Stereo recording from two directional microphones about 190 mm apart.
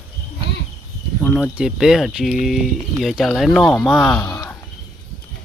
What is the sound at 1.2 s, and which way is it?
Speech, 5° left (ahead or behind).